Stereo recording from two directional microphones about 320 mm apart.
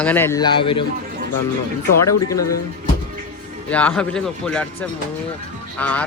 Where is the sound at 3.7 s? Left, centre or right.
Centre.